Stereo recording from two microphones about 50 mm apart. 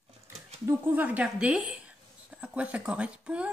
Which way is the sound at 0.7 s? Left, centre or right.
Right.